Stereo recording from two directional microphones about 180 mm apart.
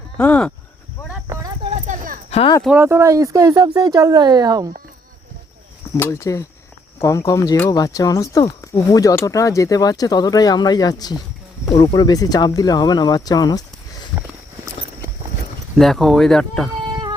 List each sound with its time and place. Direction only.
0.2 s speech: 5° left (ahead or behind)
1.0 s cricket: 15° right (ahead or behind)
1.7 s a sound: 45° right (ahead or behind)
2.3 s speech: 30° left (ahead or behind)
2.6 s speech: 10° right (ahead or behind)
6.0 s speech: 15° left (ahead or behind)
15.8 s speech: centre (ahead or behind)